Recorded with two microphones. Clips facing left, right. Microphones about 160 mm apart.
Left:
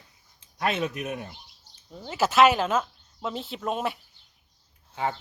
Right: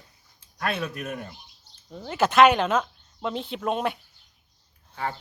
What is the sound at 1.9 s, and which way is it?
Speech, centre (ahead or behind).